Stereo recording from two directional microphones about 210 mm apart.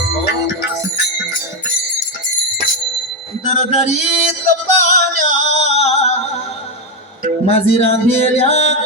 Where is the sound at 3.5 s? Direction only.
30° left (ahead or behind).